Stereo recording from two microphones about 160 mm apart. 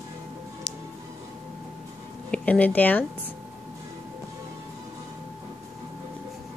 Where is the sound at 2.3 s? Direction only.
10° left (ahead or behind).